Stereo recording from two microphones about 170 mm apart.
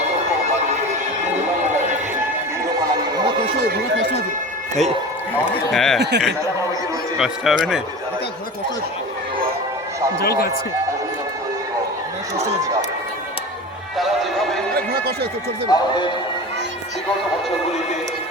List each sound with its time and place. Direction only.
5.7 s speech: centre (ahead or behind)
6.0 s speech: 80° right
7.2 s speech: 5° right (ahead or behind)
10.2 s speech: 65° left (ahead or behind)
14.9 s speech: 70° right (ahead or behind)
15.7 s speech: 20° left (ahead or behind)